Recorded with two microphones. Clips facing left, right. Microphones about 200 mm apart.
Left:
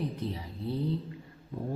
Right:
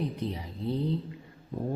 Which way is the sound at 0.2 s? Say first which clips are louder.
Right 2 dB; 20° right (ahead or behind).